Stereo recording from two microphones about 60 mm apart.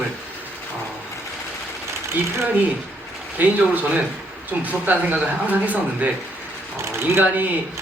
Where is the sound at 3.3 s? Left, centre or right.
Right.